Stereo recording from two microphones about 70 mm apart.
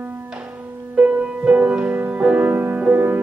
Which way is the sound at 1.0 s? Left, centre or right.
Centre.